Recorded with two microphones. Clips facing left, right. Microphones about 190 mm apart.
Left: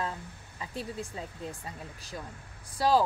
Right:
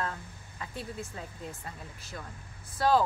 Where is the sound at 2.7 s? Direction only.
10° left (ahead or behind).